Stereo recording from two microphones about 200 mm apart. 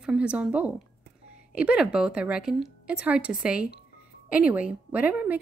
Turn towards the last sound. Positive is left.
turn(degrees=-10)  # may be behind; listen again after turning